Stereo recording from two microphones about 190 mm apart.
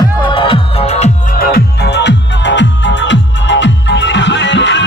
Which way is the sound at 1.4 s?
55° left (ahead or behind).